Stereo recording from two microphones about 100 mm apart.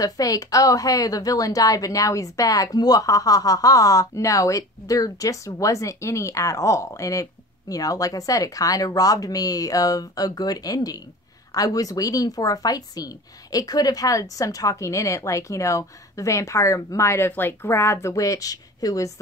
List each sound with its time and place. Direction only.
0.0 s speech: 35° left (ahead or behind)